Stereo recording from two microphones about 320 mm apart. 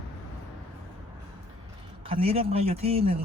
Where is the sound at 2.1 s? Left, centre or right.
Centre.